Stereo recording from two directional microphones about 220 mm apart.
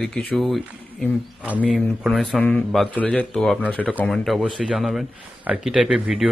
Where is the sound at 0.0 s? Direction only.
5° left (ahead or behind).